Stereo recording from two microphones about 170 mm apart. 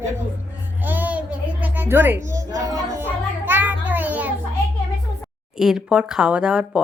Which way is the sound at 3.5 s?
10° right (ahead or behind).